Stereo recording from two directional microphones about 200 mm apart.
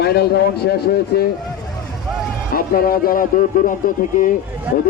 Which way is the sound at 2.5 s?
45° left (ahead or behind).